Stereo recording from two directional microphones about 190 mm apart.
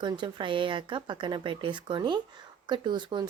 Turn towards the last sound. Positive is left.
turn(degrees=-25)  # may be behind; listen again after turning